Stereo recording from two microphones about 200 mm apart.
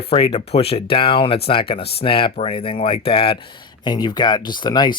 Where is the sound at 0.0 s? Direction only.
30° left (ahead or behind).